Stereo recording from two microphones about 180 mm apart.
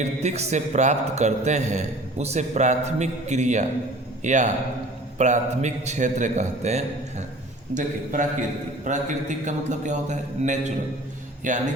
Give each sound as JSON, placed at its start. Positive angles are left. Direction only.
{"t": 0.0, "sound": "a man's voice", "side_deg": -40}